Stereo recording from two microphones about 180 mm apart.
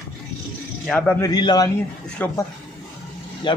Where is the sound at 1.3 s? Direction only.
20° left (ahead or behind).